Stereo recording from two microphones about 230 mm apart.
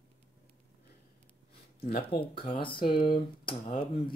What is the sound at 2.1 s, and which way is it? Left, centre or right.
Speech, left.